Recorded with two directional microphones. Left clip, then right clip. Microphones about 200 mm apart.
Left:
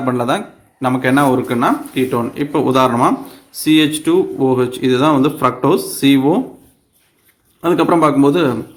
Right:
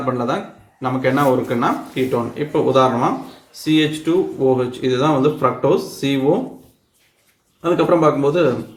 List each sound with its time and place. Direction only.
0.0 s speech: 45° left (ahead or behind)
7.6 s speech: 55° left (ahead or behind)